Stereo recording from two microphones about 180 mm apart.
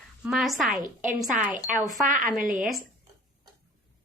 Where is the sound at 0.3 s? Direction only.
Centre (ahead or behind).